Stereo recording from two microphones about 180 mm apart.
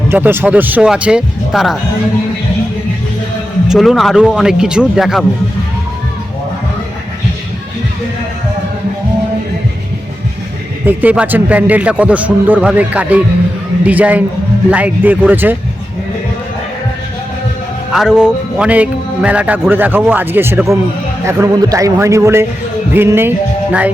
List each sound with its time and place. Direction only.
0.1 s speech: 10° right (ahead or behind)
3.7 s a man's voice: centre (ahead or behind)
10.8 s speech: 10° right (ahead or behind)
17.9 s speech: 5° right (ahead or behind)
22.9 s music: 10° right (ahead or behind)